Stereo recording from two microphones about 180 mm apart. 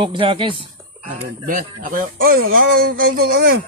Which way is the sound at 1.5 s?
50° right (ahead or behind).